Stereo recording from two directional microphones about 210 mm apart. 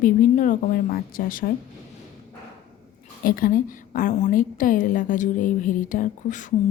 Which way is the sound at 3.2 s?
40° left (ahead or behind).